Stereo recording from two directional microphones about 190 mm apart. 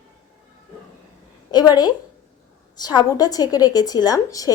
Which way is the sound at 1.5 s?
20° left (ahead or behind).